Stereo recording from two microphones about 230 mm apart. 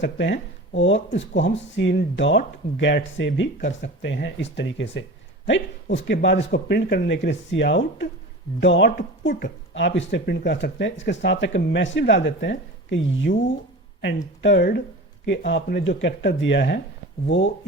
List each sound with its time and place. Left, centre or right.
0.0 s speech: left
14.4 s speech: left